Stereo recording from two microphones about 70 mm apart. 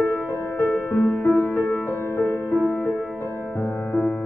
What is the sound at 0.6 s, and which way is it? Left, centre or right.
Music, left.